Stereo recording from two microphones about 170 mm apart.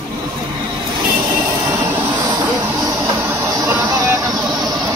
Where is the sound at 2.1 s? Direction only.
20° right (ahead or behind).